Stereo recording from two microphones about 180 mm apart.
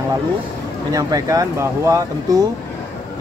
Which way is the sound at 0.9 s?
20° right (ahead or behind).